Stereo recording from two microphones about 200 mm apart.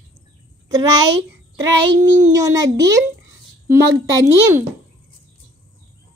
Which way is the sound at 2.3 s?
20° right (ahead or behind).